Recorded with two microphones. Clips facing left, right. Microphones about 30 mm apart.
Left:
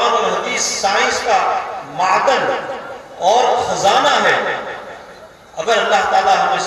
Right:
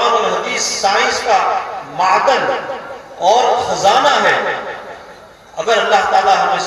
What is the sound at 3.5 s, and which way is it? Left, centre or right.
Speech, right.